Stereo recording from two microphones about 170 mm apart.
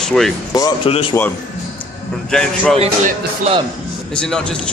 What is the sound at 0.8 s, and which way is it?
Speech, 35° left (ahead or behind).